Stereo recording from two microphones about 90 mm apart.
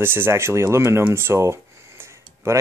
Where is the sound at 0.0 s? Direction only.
25° right (ahead or behind).